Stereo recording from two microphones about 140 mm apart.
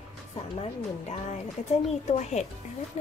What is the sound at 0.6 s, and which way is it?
A woman's voice, 50° left (ahead or behind).